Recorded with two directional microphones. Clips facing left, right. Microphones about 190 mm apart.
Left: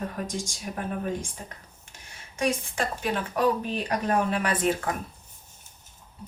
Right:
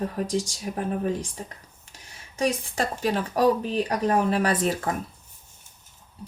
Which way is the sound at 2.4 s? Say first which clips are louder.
Right 2 dB; 35° right (ahead or behind).